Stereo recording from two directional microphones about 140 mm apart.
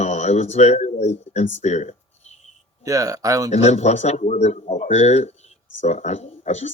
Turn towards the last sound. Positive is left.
turn(degrees=55)  # may be behind; listen again after turning